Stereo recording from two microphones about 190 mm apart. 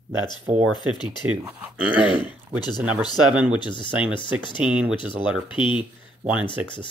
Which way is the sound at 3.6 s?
25° left (ahead or behind).